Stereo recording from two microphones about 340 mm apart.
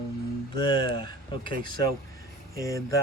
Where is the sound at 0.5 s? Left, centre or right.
Centre.